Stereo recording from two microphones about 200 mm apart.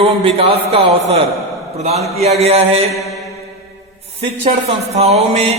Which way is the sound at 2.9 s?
Centre (ahead or behind).